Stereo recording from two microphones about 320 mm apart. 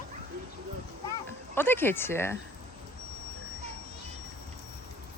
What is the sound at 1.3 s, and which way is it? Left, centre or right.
Speech, centre.